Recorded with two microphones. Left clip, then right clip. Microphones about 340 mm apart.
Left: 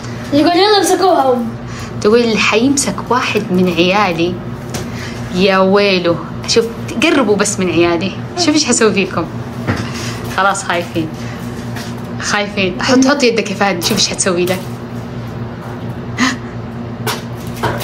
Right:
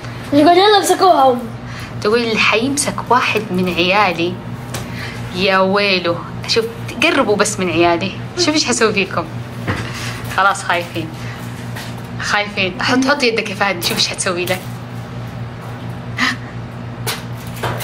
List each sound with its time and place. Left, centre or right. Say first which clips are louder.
0.5 s a woman's voice: right 1 dB; centre
2.0 s a woman's voice: left 3 dB; centre
5.3 s a woman's voice: left 3 dB; centre
10.3 s a woman's voice: even; centre
12.2 s a woman's voice: left 1 dB; centre
16.2 s crow: left 1 dB; centre